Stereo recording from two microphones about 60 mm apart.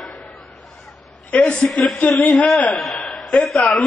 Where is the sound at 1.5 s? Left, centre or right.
Centre.